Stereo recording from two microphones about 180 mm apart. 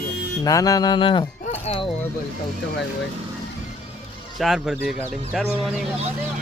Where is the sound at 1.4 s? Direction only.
35° left (ahead or behind).